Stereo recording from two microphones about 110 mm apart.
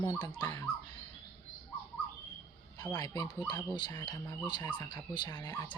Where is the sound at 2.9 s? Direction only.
35° left (ahead or behind).